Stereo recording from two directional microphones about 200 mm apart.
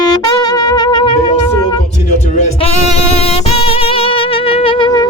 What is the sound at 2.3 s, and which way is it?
Music, 30° left (ahead or behind).